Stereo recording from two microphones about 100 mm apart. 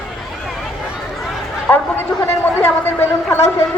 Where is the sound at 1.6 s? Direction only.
20° left (ahead or behind).